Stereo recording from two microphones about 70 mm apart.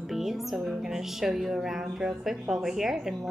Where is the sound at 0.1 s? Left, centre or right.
Centre.